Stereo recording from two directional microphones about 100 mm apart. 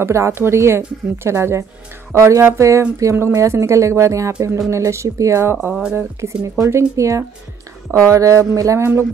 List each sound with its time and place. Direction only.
0.0 s speech: 25° right (ahead or behind)
5.9 s speech: 30° right (ahead or behind)